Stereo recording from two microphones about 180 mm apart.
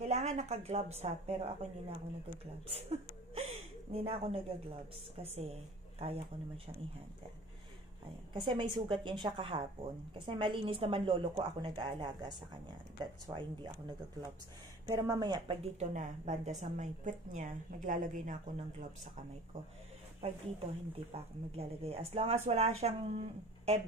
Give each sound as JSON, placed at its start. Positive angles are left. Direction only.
{"t": 0.0, "sound": "a woman's voice", "side_deg": -40}
{"t": 2.7, "sound": "a woman's voice", "side_deg": -35}
{"t": 8.3, "sound": "a woman's voice", "side_deg": -25}
{"t": 20.2, "sound": "a woman's voice", "side_deg": -35}